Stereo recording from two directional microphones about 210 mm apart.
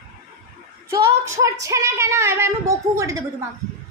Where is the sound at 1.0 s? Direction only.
15° right (ahead or behind).